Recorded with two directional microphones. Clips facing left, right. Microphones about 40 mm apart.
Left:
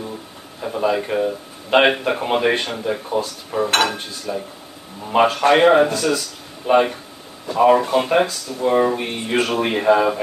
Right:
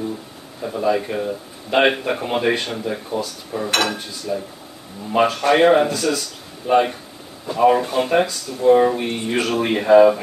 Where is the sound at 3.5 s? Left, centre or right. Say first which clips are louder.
Left 3 dB; left.